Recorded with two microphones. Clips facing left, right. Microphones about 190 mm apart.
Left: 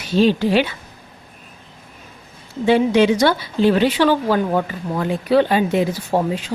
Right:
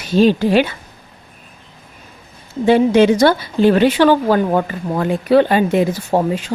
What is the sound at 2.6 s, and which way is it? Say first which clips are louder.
A woman's voice: right 3 dB; 45° right (ahead or behind).